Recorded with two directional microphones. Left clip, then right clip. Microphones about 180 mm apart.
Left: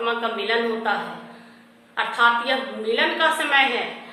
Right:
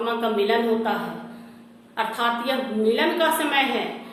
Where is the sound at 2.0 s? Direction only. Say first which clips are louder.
Left 5 dB; 10° right (ahead or behind).